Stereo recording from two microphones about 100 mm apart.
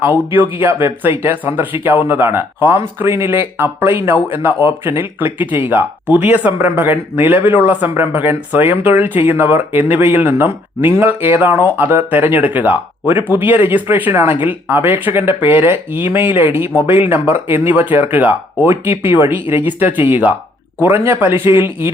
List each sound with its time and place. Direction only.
0.3 s speech: 25° right (ahead or behind)